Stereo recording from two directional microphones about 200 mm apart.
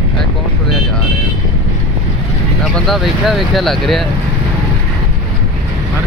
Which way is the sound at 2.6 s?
Centre (ahead or behind).